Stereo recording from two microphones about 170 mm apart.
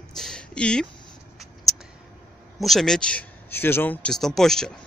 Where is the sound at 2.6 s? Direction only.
Centre (ahead or behind).